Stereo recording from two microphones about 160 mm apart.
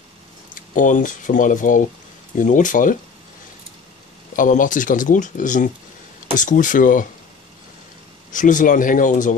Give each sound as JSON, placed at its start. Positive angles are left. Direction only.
{"t": 0.7, "sound": "speech", "side_deg": 55}
{"t": 4.4, "sound": "speech", "side_deg": 55}
{"t": 8.3, "sound": "speech", "side_deg": 55}